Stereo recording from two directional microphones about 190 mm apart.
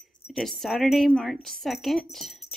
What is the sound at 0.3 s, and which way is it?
A woman's voice, centre (ahead or behind).